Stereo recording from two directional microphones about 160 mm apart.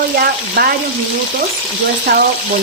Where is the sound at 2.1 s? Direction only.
65° right (ahead or behind).